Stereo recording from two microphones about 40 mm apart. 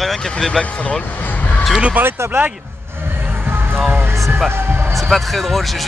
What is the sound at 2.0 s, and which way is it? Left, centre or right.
Speech, right.